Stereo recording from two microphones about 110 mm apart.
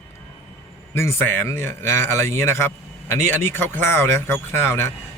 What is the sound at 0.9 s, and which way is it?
A man's voice, 25° left (ahead or behind).